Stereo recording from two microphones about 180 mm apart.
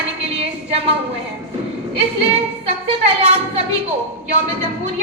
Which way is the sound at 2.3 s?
35° right (ahead or behind).